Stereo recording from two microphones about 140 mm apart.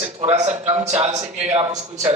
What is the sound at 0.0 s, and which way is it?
A man's voice, 50° right (ahead or behind).